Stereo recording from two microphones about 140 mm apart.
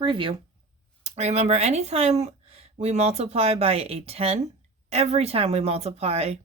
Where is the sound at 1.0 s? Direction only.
50° right (ahead or behind).